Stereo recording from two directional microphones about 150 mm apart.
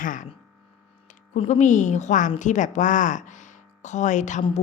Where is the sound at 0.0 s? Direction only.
60° left (ahead or behind).